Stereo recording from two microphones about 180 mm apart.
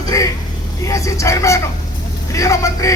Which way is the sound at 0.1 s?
20° left (ahead or behind).